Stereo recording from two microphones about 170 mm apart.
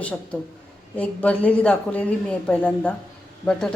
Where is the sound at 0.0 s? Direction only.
10° left (ahead or behind).